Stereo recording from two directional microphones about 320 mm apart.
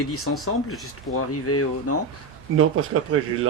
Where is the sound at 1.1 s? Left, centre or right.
Left.